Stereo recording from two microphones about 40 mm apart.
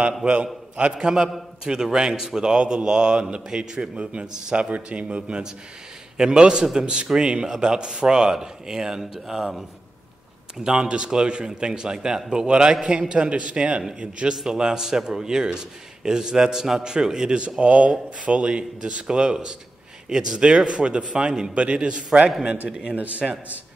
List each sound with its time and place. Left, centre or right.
0.2 s a man's voice: right
0.9 s a man's voice: centre
10.6 s a man's voice: centre
17.6 s a man's voice: right